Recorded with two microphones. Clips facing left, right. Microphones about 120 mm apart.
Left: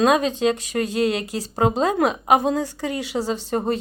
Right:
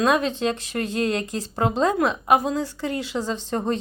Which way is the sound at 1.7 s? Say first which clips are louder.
Even; 25° left (ahead or behind).